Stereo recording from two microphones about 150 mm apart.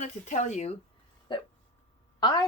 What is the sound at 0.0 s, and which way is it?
Speech, 55° left (ahead or behind).